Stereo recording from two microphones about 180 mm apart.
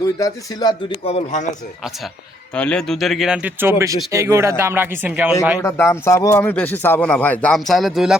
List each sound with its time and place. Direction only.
0.0 s speech: 20° left (ahead or behind)
1.0 s speech: 40° left (ahead or behind)
2.6 s speech: 5° left (ahead or behind); by 5.3 s 10° right (ahead or behind)
5.5 s speech: 15° left (ahead or behind); by 8.1 s centre (ahead or behind)